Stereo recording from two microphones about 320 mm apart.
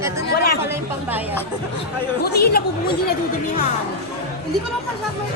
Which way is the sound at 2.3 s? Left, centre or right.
Left.